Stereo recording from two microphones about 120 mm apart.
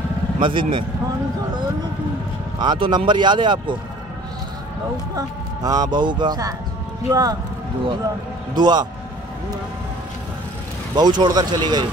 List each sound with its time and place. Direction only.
0.4 s speech: 45° right (ahead or behind)
2.6 s speech: 40° right (ahead or behind)
5.1 s speech: 30° right (ahead or behind)
8.5 s speech: 35° right (ahead or behind)
11.0 s speech: 35° right (ahead or behind)